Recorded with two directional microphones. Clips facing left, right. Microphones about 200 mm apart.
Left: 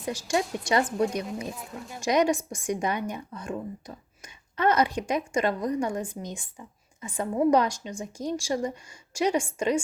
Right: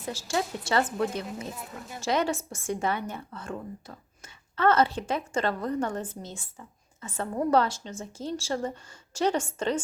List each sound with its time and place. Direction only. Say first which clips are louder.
0.0 s a woman's voice: left 3 dB; 15° left (ahead or behind)
1.5 s speech: left 1 dB; centre (ahead or behind)
2.0 s a woman's voice: left 4 dB; 15° left (ahead or behind)